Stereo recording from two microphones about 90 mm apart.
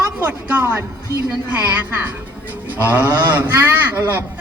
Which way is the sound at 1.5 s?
20° right (ahead or behind).